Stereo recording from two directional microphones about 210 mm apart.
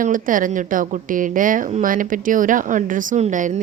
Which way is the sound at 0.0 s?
40° right (ahead or behind).